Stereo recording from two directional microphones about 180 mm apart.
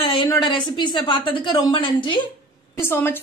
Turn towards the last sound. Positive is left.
turn(degrees=10)  # may be behind; listen again after turning